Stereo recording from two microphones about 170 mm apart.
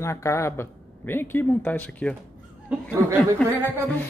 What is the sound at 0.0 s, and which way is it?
Speech, 15° left (ahead or behind).